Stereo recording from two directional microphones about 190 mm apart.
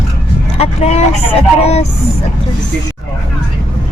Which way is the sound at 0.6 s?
35° left (ahead or behind).